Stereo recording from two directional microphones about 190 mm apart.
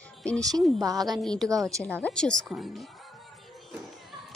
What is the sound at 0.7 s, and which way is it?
Speech, 20° right (ahead or behind).